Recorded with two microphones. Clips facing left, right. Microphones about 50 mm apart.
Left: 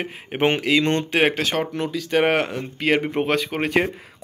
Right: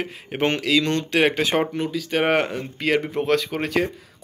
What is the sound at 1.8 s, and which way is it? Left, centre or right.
A man's voice, centre.